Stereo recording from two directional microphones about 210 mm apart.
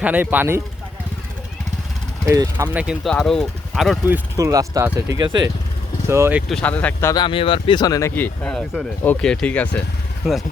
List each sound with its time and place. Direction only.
0.0 s speech: 10° right (ahead or behind)
2.2 s speech: 15° right (ahead or behind)
4.0 s speech: 10° right (ahead or behind)
6.5 s speech: 5° left (ahead or behind)
7.1 s speech: 20° left (ahead or behind); by 10.4 s centre (ahead or behind)